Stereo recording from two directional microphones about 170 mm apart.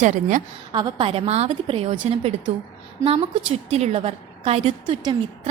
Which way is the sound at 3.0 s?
35° right (ahead or behind).